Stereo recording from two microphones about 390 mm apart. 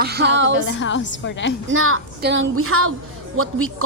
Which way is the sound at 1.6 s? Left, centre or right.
Right.